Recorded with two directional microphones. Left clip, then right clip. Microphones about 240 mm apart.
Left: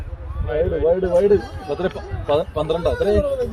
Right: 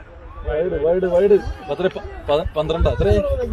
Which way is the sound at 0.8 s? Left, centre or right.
Right.